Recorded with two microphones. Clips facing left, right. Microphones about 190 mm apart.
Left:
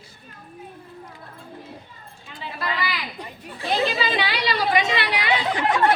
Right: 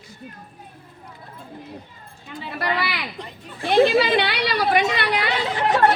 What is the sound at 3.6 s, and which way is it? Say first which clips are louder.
A woman's voice: right 7 dB; 50° right (ahead or behind).